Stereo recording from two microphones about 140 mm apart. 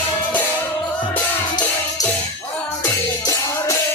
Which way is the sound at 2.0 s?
25° left (ahead or behind).